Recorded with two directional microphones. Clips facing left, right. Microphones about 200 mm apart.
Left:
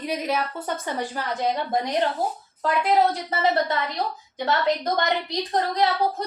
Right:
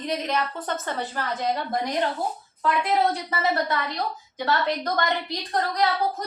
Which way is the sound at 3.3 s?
25° left (ahead or behind).